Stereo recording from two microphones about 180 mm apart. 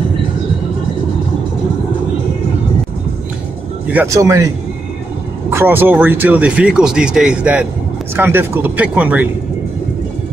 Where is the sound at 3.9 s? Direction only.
15° right (ahead or behind).